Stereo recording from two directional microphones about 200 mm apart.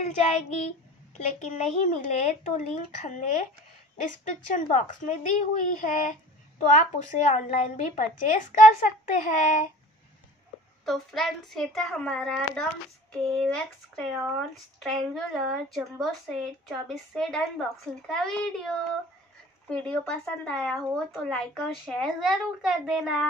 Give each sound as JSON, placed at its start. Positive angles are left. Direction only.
{"t": 0.0, "sound": "speech", "side_deg": 35}
{"t": 10.9, "sound": "speech", "side_deg": 0}
{"t": 19.7, "sound": "speech", "side_deg": 5}